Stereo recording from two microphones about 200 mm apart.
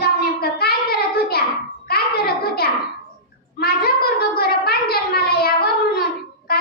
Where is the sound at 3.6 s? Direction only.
50° left (ahead or behind).